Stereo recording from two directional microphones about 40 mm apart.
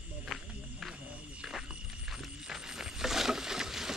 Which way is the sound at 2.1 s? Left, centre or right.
Centre.